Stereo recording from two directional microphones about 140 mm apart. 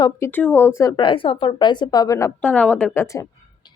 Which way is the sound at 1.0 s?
35° left (ahead or behind).